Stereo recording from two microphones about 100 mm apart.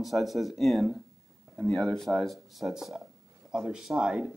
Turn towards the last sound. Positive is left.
turn(degrees=-5)  # may be behind; listen again after turning